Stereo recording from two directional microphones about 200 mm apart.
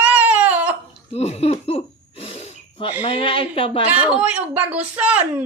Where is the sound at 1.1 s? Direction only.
30° left (ahead or behind).